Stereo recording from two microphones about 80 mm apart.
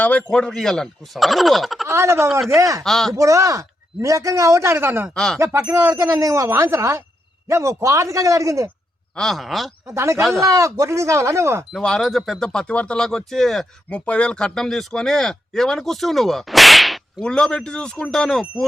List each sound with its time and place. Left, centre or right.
0.0 s speech: centre
1.9 s a man's voice: right
2.8 s speech: centre
3.1 s a man's voice: right
5.1 s speech: centre
5.4 s speech: right
9.1 s speech: centre
9.8 s speech: right
11.7 s speech: centre
13.9 s speech: centre
17.2 s speech: centre